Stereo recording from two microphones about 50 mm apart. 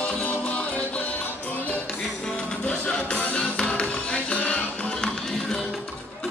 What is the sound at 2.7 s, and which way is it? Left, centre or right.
Music, left.